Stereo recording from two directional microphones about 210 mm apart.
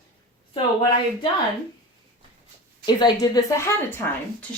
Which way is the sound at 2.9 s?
20° left (ahead or behind).